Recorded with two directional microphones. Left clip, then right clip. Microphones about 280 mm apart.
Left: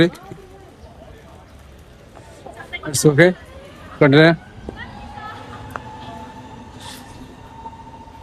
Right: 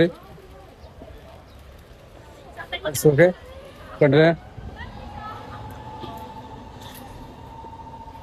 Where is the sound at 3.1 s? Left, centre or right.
Centre.